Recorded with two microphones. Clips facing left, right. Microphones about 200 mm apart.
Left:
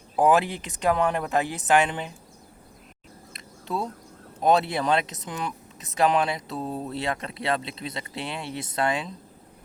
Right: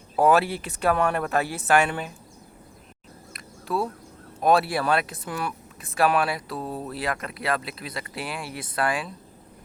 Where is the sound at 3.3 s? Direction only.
20° left (ahead or behind).